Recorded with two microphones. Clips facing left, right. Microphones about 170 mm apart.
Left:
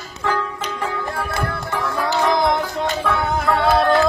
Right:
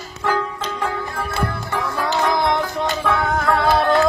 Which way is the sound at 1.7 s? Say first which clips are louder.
Left 1 dB; centre (ahead or behind).